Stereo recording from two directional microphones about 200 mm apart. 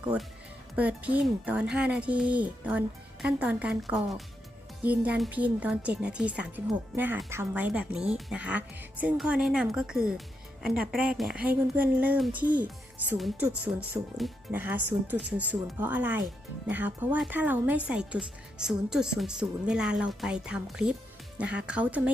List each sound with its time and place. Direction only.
0.0 s speech: 5° right (ahead or behind)